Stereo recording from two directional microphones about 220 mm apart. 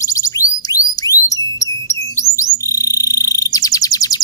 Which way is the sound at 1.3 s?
15° left (ahead or behind).